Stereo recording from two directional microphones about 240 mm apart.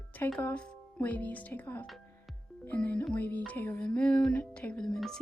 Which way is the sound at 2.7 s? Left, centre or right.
Centre.